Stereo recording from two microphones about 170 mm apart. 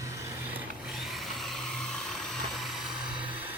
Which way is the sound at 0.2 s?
15° right (ahead or behind).